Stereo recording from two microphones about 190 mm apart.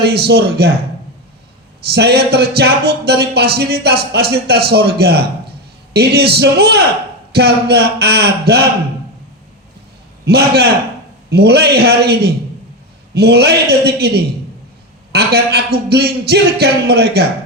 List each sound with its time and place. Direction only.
0.0 s speech: 60° right (ahead or behind)
1.9 s speech: 60° right (ahead or behind)
10.2 s speech: 55° right (ahead or behind)